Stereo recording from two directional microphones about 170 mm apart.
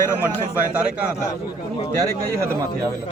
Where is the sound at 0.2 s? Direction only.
10° right (ahead or behind).